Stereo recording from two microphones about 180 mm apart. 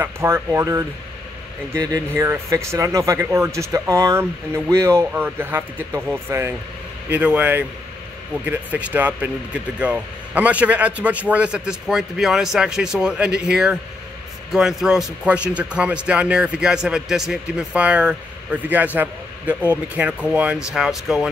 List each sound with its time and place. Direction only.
0.0 s speech: 15° right (ahead or behind)